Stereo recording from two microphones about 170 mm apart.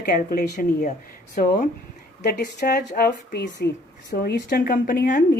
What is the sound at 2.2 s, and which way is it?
Speech, 75° left (ahead or behind).